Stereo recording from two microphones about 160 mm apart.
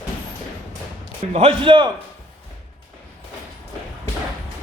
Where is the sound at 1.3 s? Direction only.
35° right (ahead or behind).